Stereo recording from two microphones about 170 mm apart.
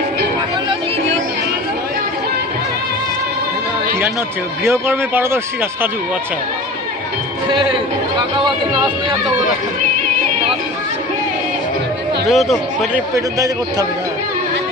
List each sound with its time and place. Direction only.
4.6 s speech: 15° right (ahead or behind)
12.3 s speech: centre (ahead or behind)
13.1 s a man's voice: 20° right (ahead or behind)